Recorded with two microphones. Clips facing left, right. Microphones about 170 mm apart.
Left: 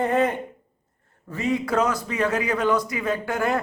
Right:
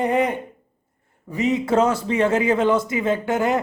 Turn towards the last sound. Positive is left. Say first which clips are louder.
# right 4 dB
turn(degrees=-20)  # may be behind; listen again after turning